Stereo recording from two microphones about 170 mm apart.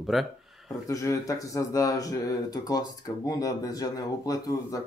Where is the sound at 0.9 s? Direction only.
20° left (ahead or behind).